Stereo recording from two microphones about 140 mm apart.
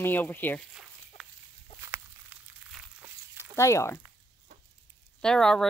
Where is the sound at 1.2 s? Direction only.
Centre (ahead or behind).